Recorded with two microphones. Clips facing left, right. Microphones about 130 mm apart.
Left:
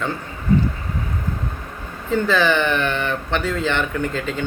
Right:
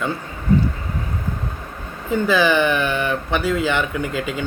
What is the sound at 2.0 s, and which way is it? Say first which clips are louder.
Speech: right 1 dB; 15° right (ahead or behind).